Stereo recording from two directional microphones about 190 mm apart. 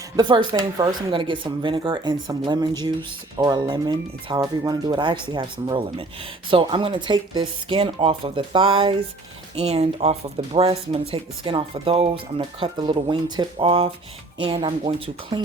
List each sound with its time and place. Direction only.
0.2 s speech: 25° right (ahead or behind)